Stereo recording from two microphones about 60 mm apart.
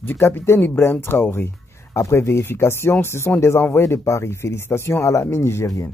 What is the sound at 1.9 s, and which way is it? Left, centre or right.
Speech, left.